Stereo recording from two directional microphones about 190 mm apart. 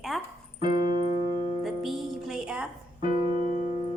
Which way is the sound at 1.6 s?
Centre (ahead or behind).